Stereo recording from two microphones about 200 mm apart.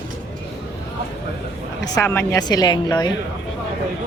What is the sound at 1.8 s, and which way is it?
Speech, 15° left (ahead or behind).